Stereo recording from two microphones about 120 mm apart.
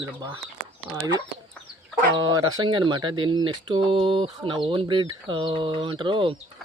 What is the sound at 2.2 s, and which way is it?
Speech, 35° right (ahead or behind).